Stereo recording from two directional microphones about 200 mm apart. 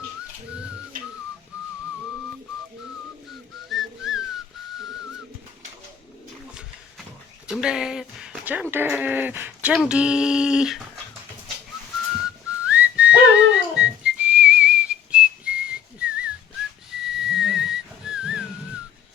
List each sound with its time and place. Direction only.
0.9 s whistling: 40° right (ahead or behind)
3.7 s whistling: centre (ahead or behind)
7.4 s speech: 5° right (ahead or behind)
12.6 s whistling: 5° right (ahead or behind)